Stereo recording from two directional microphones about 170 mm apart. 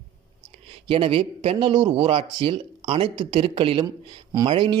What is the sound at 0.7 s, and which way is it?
A man's voice, 30° right (ahead or behind).